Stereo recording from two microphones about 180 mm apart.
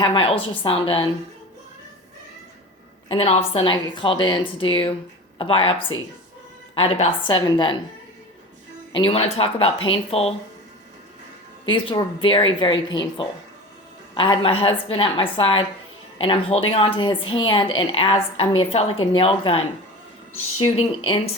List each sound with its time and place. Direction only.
0.0 s speech: 30° left (ahead or behind)
3.1 s speech: 35° left (ahead or behind)
9.0 s a woman's voice: 30° left (ahead or behind)
11.6 s a woman's voice: 30° left (ahead or behind)